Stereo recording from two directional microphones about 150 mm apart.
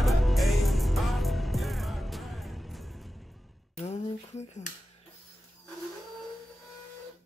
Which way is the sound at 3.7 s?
45° left (ahead or behind).